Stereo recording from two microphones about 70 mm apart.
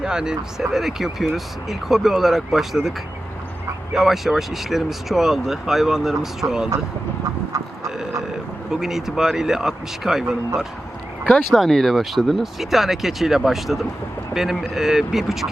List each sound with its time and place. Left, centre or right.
0.0 s speech: centre
3.9 s speech: centre
6.4 s speech: right
8.7 s speech: centre
11.5 s speech: centre